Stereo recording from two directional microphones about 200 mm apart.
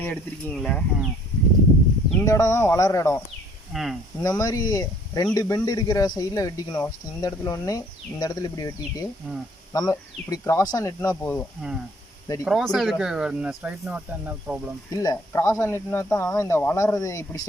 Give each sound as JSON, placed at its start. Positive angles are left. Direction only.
{"t": 0.0, "sound": "speech", "side_deg": 5}
{"t": 2.2, "sound": "speech", "side_deg": 15}
{"t": 3.7, "sound": "speech", "side_deg": 0}
{"t": 4.2, "sound": "speech", "side_deg": 15}
{"t": 9.2, "sound": "speech", "side_deg": -5}
{"t": 9.7, "sound": "speech", "side_deg": 20}
{"t": 12.5, "sound": "speech", "side_deg": 0}
{"t": 14.8, "sound": "speech", "side_deg": 15}